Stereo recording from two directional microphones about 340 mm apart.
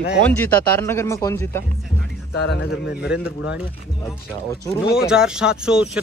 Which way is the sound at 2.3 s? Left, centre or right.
Left.